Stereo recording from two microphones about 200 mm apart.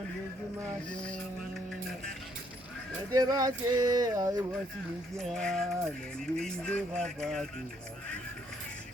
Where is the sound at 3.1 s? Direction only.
20° right (ahead or behind).